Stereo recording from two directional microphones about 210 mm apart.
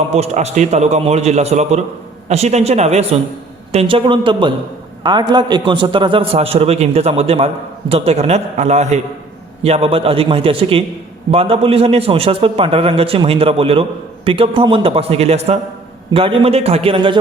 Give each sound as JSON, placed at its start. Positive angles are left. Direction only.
{"t": 0.1, "sound": "a man's voice", "side_deg": -30}